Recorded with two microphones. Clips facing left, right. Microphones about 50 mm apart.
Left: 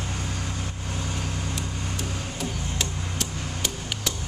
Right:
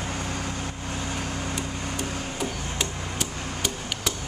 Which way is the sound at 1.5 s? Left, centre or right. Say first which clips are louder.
Right 2 dB; centre.